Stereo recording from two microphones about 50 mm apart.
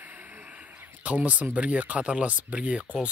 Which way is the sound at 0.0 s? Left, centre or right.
Right.